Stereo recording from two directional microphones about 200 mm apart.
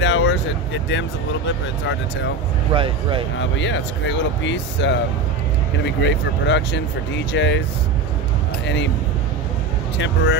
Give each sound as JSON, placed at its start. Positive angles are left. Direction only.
{"t": 0.0, "sound": "vehicle", "side_deg": 65}
{"t": 2.7, "sound": "speech", "side_deg": -25}
{"t": 3.3, "sound": "speech", "side_deg": 65}
{"t": 8.6, "sound": "speech", "side_deg": 60}
{"t": 9.9, "sound": "speech", "side_deg": 65}